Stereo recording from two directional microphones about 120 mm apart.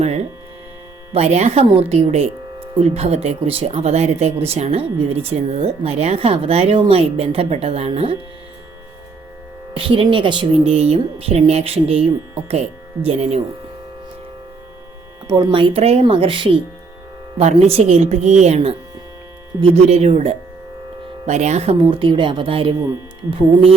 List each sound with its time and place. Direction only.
1.1 s speech: 65° right (ahead or behind)
9.7 s speech: 50° right (ahead or behind)
10.6 s speech: 60° right (ahead or behind)
15.3 s speech: 35° right (ahead or behind)
15.5 s speech: 50° right (ahead or behind)
17.3 s speech: 60° right (ahead or behind)
21.2 s speech: 75° right (ahead or behind); by 22.7 s 50° right (ahead or behind)